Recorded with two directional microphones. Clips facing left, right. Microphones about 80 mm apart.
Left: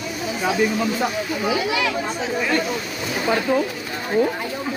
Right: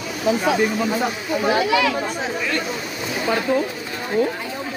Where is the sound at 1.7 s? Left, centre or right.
Right.